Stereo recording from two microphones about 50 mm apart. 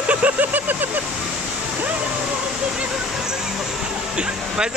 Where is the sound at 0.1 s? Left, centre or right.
Right.